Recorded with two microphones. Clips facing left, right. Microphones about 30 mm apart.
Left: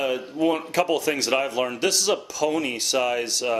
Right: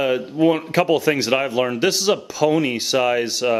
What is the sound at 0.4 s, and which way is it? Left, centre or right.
A man's voice, centre.